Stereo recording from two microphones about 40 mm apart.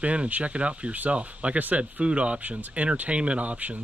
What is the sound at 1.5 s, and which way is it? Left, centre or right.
Speech, right.